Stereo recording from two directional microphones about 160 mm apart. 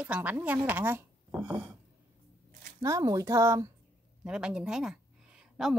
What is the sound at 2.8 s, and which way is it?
Speech, 20° right (ahead or behind).